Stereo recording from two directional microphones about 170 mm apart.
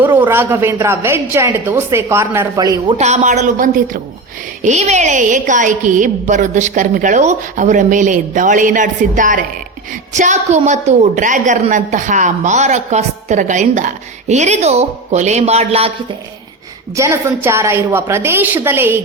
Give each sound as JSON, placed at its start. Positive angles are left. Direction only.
{"t": 0.0, "sound": "a woman's voice", "side_deg": -10}
{"t": 3.0, "sound": "a woman's voice", "side_deg": -45}
{"t": 16.9, "sound": "a woman's voice", "side_deg": -15}